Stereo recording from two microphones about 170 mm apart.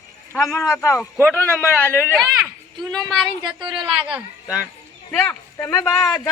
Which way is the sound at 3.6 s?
25° right (ahead or behind).